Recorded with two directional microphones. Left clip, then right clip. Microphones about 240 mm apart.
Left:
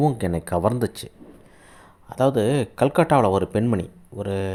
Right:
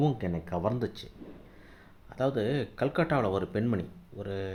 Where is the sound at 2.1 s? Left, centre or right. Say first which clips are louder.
Left 10 dB; left.